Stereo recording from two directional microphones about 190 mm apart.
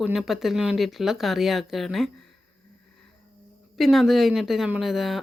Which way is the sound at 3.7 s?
Centre (ahead or behind).